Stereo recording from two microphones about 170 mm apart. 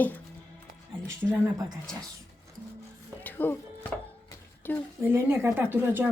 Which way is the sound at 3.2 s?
10° left (ahead or behind).